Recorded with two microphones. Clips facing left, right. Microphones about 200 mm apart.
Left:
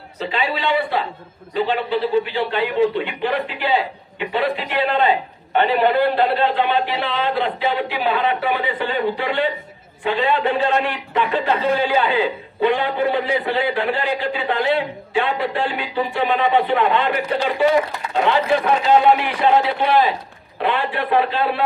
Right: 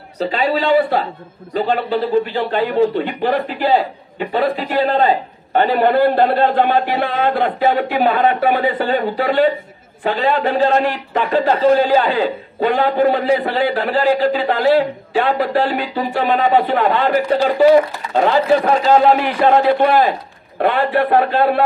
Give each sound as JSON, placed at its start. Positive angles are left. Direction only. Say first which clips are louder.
{"t": 0.2, "sound": "a man's voice", "louder": "right 5 dB", "side_deg": -40}